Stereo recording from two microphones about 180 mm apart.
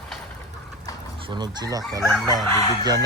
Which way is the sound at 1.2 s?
25° right (ahead or behind).